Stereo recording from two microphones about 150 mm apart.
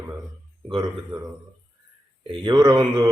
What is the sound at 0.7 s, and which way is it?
Speech, 30° right (ahead or behind).